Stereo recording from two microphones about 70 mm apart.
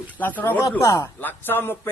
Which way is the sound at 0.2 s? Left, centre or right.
Left.